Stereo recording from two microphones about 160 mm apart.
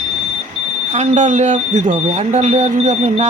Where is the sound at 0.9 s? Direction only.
45° right (ahead or behind).